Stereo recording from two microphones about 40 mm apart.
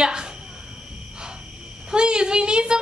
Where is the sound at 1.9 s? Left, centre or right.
Right.